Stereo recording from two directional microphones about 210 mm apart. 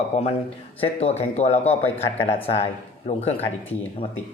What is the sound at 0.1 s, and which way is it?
Speech, 35° left (ahead or behind).